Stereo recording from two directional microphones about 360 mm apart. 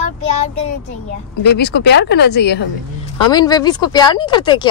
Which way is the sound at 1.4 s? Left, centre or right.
Left.